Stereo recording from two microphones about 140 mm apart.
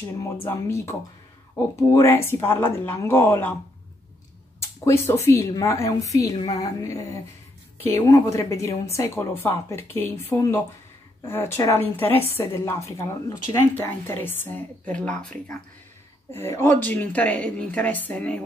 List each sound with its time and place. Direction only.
0.5 s a woman's voice: 20° left (ahead or behind)
4.6 s a woman's voice: 20° left (ahead or behind)
11.2 s a woman's voice: 15° left (ahead or behind)